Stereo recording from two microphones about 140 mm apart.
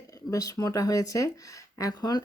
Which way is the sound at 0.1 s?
25° left (ahead or behind).